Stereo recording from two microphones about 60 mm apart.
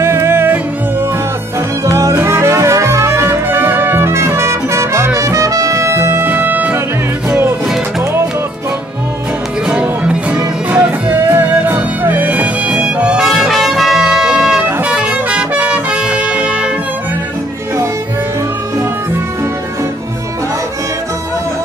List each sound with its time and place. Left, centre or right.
0.0 s music: right
1.9 s music: right
6.3 s music: right
7.2 s music: right
9.7 s music: right
11.1 s music: right
11.7 s music: right
12.8 s music: centre
13.3 s music: centre